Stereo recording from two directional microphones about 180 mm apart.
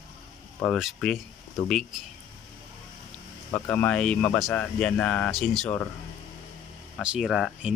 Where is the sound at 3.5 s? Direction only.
10° left (ahead or behind).